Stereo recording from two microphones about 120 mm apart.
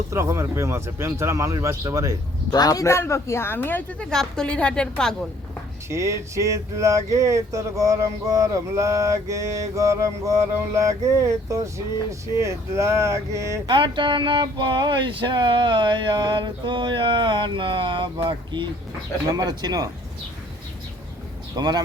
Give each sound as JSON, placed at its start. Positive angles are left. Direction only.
{"t": 0.1, "sound": "speech", "side_deg": -25}
{"t": 2.5, "sound": "speech", "side_deg": 30}
{"t": 5.9, "sound": "speech", "side_deg": -25}
{"t": 13.7, "sound": "speech", "side_deg": -40}
{"t": 21.5, "sound": "speech", "side_deg": -35}